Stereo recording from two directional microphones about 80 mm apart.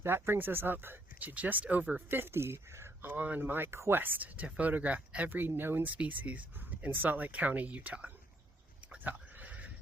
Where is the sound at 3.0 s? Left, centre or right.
Right.